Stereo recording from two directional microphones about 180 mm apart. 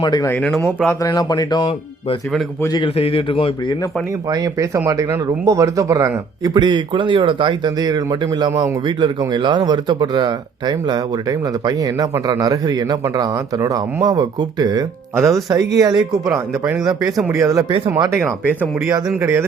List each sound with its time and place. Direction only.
0.0 s a man's voice: 25° left (ahead or behind)
0.3 s a man's voice: 10° left (ahead or behind); by 3.8 s 30° left (ahead or behind)
4.3 s speech: 20° right (ahead or behind)
17.7 s speech: 30° right (ahead or behind)
17.9 s speech: 15° right (ahead or behind)